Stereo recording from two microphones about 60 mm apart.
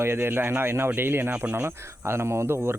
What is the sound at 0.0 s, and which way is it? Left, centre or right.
Speech, right.